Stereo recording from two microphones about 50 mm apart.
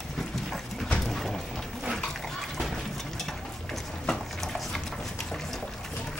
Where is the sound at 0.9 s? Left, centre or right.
Centre.